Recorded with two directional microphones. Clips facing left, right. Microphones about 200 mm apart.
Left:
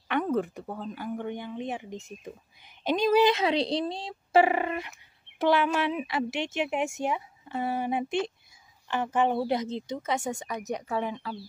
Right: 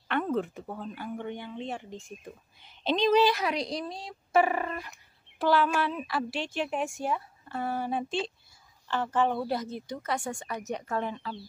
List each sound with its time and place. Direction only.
0.9 s speech: 10° left (ahead or behind)
3.3 s a woman's voice: 25° left (ahead or behind); by 11.4 s 10° left (ahead or behind)